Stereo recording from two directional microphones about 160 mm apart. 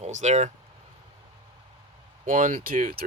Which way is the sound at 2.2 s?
55° right (ahead or behind).